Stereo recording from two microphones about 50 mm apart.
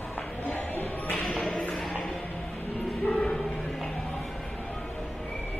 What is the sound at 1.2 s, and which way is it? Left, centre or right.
Music, centre.